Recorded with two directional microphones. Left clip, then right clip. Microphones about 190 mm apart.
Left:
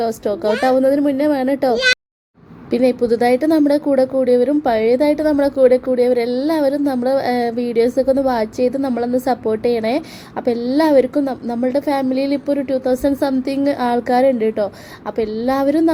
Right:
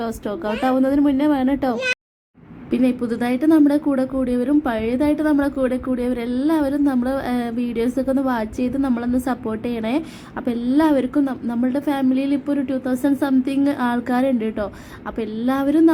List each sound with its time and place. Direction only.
0.0 s a woman's voice: 5° left (ahead or behind)